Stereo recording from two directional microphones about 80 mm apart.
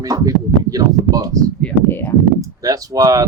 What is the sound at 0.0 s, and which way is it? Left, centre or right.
Speech, right.